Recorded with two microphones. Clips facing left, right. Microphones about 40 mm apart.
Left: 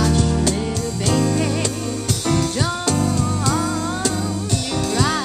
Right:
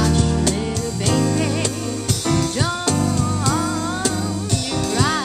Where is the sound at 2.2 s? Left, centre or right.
Centre.